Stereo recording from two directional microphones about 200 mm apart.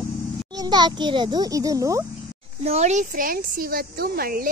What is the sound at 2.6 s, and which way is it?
Speech, 35° right (ahead or behind).